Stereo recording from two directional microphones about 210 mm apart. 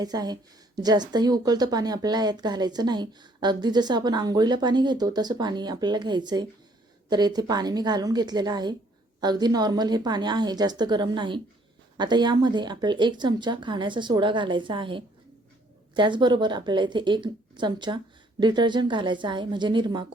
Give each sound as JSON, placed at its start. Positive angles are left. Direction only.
{"t": 0.0, "sound": "a woman's voice", "side_deg": -20}